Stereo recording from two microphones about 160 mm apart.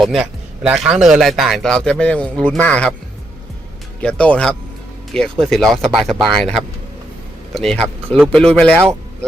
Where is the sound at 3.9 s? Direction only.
10° left (ahead or behind).